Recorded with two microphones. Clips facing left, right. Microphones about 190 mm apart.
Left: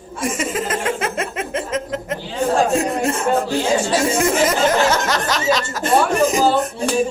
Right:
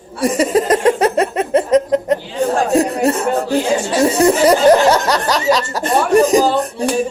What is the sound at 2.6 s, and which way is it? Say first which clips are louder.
Speech: right 4 dB; 35° right (ahead or behind).